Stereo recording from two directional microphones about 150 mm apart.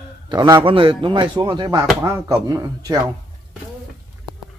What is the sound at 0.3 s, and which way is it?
A woman's voice, 30° right (ahead or behind).